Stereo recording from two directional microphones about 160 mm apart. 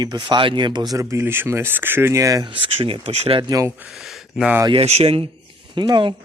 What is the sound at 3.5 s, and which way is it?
Speech, 20° right (ahead or behind).